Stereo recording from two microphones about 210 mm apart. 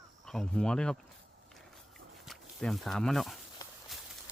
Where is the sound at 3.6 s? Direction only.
15° left (ahead or behind).